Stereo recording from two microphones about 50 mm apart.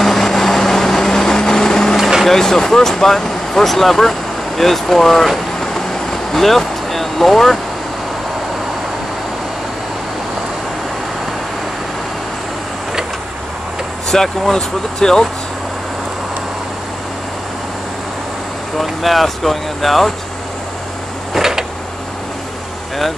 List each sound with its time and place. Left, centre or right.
0.0 s vehicle: centre
2.0 s vehicle: centre
2.2 s speech: centre
14.0 s speech: centre
18.8 s speech: centre
21.3 s a sound: centre